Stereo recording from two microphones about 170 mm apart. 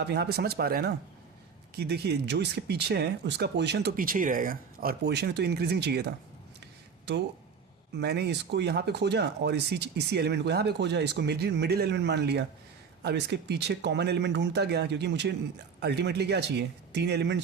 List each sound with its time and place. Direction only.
0.0 s speech: 75° right (ahead or behind)
3.9 s speech: 55° right (ahead or behind); by 6.1 s 75° right (ahead or behind)
7.9 s speech: 75° right (ahead or behind); by 15.4 s 90° right
15.8 s speech: 80° right